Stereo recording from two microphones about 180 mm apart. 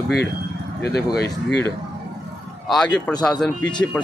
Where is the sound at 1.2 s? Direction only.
70° left (ahead or behind).